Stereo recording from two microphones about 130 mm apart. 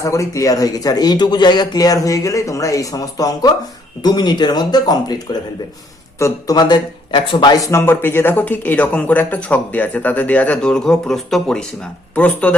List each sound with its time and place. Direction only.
0.0 s speech: 25° left (ahead or behind)
6.1 s speech: 20° left (ahead or behind)
6.6 s speech: 40° left (ahead or behind); by 12.5 s 10° left (ahead or behind)